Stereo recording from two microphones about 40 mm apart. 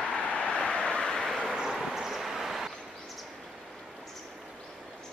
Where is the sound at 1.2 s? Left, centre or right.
Centre.